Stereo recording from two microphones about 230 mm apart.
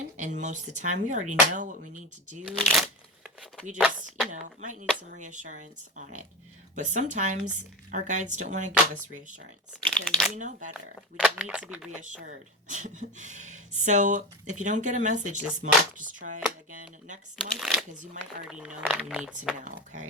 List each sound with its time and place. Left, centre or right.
0.2 s speech: right
2.5 s speech: centre
4.3 s speech: right
10.1 s speech: centre
10.3 s speech: right
11.2 s speech: centre
12.2 s speech: right
17.4 s speech: centre
18.0 s speech: right
18.8 s speech: centre
19.5 s speech: right